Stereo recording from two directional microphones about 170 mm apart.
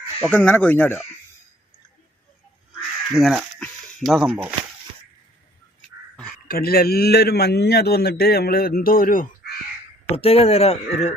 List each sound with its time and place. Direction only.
0.2 s speech: 10° left (ahead or behind)
3.1 s speech: centre (ahead or behind)
6.5 s a man's voice: 60° left (ahead or behind)
10.2 s speech: 35° left (ahead or behind)